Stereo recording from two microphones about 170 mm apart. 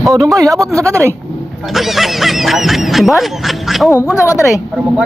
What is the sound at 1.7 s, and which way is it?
Speech, centre (ahead or behind).